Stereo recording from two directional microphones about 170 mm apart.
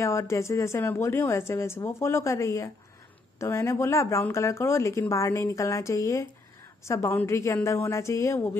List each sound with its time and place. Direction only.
0.0 s speech: 15° left (ahead or behind)